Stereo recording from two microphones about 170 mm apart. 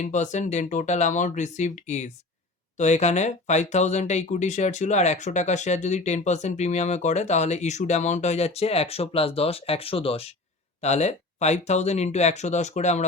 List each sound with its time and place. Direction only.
0.0 s speech: 45° left (ahead or behind)